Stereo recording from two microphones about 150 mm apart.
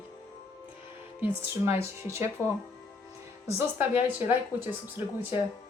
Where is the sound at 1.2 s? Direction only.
15° right (ahead or behind).